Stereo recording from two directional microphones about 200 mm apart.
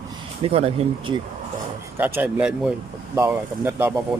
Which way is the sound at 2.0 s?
10° right (ahead or behind).